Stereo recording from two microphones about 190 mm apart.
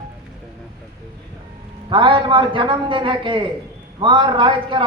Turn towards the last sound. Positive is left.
turn(degrees=-25)  # may be behind; listen again after turning